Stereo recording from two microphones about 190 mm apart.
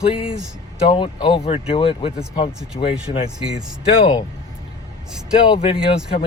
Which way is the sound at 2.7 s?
40° left (ahead or behind).